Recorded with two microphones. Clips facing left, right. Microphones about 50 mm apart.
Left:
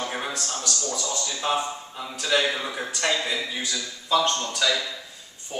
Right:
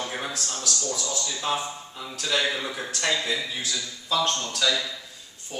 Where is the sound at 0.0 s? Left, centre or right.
Centre.